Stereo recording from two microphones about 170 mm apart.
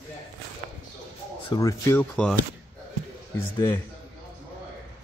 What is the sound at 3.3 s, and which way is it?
Speech, 15° left (ahead or behind).